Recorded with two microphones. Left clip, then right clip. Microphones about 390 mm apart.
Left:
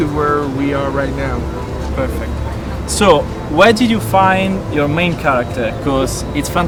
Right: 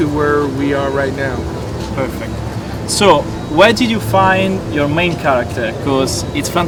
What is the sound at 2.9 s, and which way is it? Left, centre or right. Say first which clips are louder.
Speech: right 1 dB; left.